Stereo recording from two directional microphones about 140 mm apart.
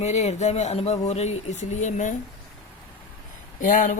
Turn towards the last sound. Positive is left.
turn(degrees=65)  # may be behind; listen again after turning